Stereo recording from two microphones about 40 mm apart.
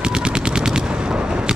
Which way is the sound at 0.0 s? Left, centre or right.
Right.